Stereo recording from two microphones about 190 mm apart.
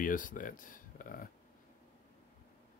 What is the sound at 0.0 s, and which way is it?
Speech, 45° left (ahead or behind).